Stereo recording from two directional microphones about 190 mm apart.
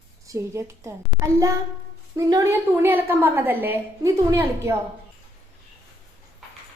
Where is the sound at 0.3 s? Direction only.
15° right (ahead or behind).